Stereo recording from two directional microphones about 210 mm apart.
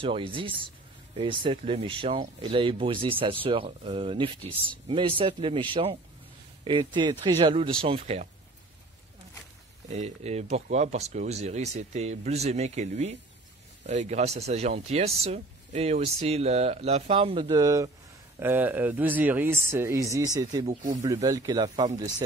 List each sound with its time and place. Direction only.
0.0 s speech: 25° right (ahead or behind)
9.8 s speech: 30° right (ahead or behind)